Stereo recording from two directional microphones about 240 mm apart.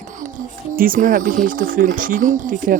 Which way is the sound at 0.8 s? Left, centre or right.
Right.